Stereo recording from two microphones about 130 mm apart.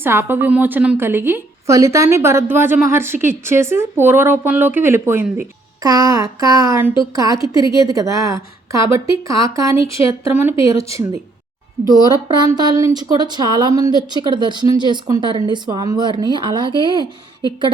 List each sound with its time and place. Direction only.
0.0 s a woman's voice: 15° right (ahead or behind)
5.8 s a woman's voice: 30° right (ahead or behind)
11.9 s speech: 30° right (ahead or behind)